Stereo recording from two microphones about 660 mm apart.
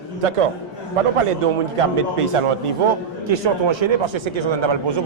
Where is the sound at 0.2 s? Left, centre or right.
Right.